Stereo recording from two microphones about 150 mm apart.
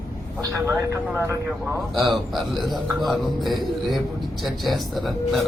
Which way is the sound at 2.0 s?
Centre (ahead or behind).